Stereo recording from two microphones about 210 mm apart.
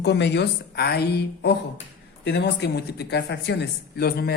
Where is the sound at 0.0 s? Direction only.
55° left (ahead or behind).